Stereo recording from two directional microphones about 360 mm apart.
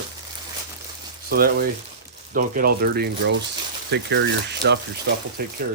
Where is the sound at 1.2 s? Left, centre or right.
Right.